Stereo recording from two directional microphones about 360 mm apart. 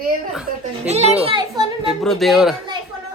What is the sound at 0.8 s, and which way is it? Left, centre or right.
Speech, centre.